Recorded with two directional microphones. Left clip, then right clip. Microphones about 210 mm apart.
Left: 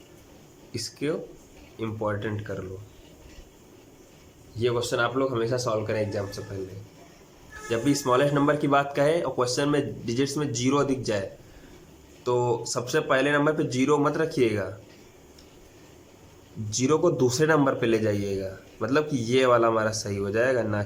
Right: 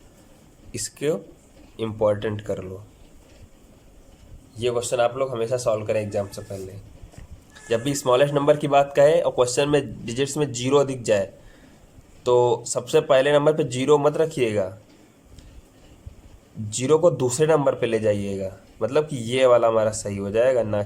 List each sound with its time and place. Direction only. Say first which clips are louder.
0.7 s a man's voice: right 4 dB; 20° right (ahead or behind)
4.5 s a man's voice: right 3 dB; 15° right (ahead or behind)
7.7 s speech: right 3 dB; 20° right (ahead or behind)
12.2 s speech: right 6 dB; 20° right (ahead or behind)
16.6 s a man's voice: right 5 dB; 20° right (ahead or behind)